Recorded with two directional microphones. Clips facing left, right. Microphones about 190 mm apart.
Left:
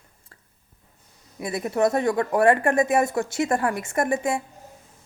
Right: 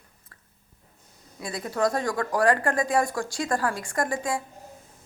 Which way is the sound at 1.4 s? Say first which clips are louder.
Left 4 dB; 20° left (ahead or behind).